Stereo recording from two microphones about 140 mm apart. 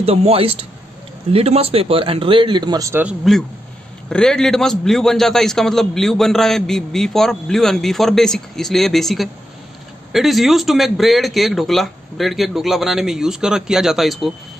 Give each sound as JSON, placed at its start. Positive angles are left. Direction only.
{"t": 0.0, "sound": "a man's voice", "side_deg": -45}
{"t": 2.9, "sound": "speech", "side_deg": -10}
{"t": 4.1, "sound": "a man's voice", "side_deg": 5}